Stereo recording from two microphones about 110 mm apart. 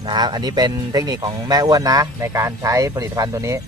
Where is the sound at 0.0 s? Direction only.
40° right (ahead or behind).